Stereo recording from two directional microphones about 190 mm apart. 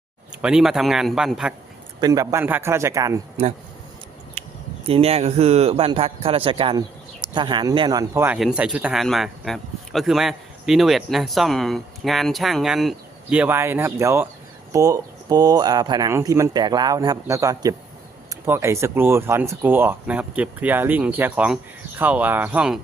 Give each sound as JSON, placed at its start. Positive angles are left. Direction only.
{"t": 0.4, "sound": "speech", "side_deg": -5}
{"t": 2.0, "sound": "speech", "side_deg": -20}
{"t": 4.4, "sound": "speech", "side_deg": -30}